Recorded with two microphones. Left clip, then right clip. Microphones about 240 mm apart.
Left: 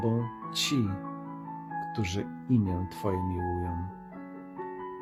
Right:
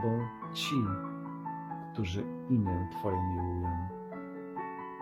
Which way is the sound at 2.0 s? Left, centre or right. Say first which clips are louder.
Left 3 dB; left.